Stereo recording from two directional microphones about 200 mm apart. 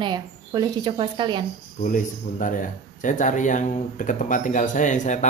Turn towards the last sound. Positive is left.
turn(degrees=35)  # may be behind; listen again after turning